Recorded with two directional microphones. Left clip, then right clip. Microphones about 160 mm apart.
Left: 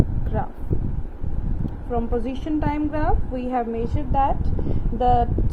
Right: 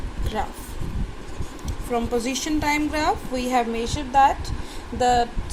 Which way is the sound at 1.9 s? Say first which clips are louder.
Right 2 dB; 5° right (ahead or behind).